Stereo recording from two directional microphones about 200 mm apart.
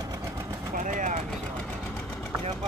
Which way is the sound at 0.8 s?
40° right (ahead or behind).